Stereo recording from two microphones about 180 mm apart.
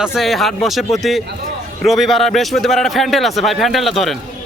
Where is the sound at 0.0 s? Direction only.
Centre (ahead or behind).